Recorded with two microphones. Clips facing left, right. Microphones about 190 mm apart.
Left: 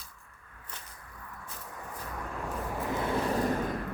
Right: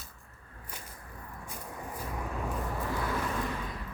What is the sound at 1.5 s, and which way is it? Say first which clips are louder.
Vehicle: right 3 dB; 15° right (ahead or behind).